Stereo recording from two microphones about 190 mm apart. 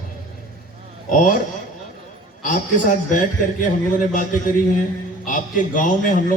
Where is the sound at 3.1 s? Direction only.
45° left (ahead or behind).